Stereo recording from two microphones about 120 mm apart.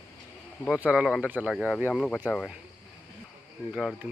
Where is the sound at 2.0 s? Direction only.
10° left (ahead or behind).